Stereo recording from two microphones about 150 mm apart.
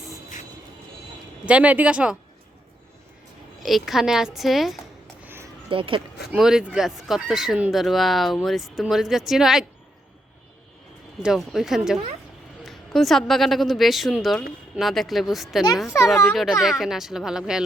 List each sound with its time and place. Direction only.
1.5 s speech: 10° right (ahead or behind)
3.6 s speech: centre (ahead or behind)
5.2 s a sound: 15° right (ahead or behind)
5.6 s speech: 35° right (ahead or behind)
6.3 s speech: 5° right (ahead or behind)
11.2 s speech: centre (ahead or behind)